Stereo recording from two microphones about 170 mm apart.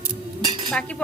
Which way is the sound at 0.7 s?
5° left (ahead or behind).